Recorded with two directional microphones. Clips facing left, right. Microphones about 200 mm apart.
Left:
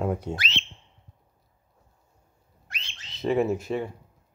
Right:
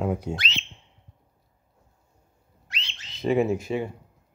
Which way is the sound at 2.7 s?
50° left (ahead or behind).